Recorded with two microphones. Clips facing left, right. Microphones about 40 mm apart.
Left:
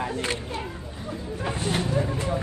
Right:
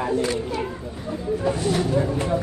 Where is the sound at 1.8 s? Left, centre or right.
Right.